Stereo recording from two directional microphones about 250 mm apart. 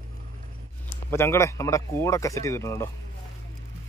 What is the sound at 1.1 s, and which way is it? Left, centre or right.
Speech, centre.